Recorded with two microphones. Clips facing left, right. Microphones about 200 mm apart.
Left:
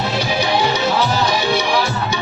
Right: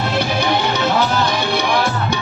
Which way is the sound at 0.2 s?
55° right (ahead or behind).